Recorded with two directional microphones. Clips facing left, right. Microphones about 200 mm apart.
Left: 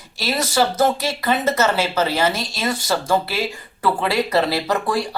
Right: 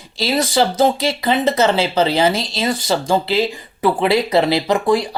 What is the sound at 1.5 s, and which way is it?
Speech, 30° right (ahead or behind).